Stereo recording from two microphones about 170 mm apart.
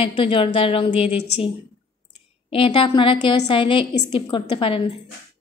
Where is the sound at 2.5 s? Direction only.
30° left (ahead or behind).